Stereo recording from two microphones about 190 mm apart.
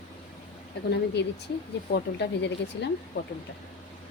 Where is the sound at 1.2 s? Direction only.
65° left (ahead or behind).